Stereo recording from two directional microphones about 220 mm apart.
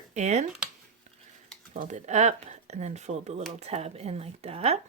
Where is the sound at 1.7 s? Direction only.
30° right (ahead or behind).